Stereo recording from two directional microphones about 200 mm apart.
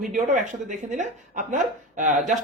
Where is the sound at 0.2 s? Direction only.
40° right (ahead or behind).